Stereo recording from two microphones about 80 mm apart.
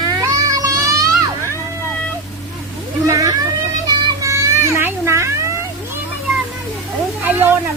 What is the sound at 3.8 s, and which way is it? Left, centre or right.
Children playing, right.